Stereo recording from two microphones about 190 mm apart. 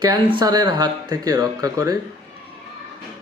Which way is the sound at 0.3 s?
20° right (ahead or behind).